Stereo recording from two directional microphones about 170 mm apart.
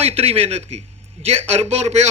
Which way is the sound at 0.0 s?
35° right (ahead or behind).